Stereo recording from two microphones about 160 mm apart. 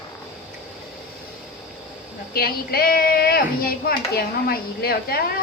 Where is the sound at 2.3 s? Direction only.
70° left (ahead or behind).